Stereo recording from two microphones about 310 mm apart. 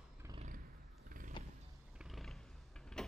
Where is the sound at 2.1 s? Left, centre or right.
Centre.